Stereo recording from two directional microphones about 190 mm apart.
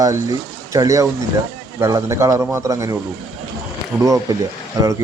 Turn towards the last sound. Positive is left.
turn(degrees=-15)  # may be behind; listen again after turning